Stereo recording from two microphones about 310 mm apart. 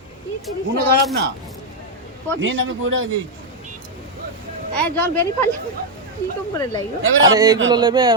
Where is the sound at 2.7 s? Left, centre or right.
Right.